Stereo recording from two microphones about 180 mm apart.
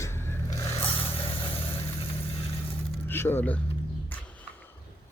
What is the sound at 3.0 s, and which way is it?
Speech, 10° left (ahead or behind).